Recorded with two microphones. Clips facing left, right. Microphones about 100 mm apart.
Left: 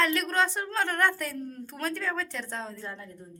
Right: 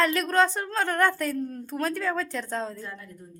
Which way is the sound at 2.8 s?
25° left (ahead or behind).